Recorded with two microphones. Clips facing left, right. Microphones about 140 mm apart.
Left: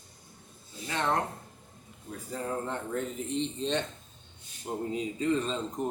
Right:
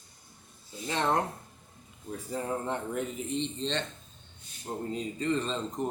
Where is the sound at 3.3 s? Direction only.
Centre (ahead or behind).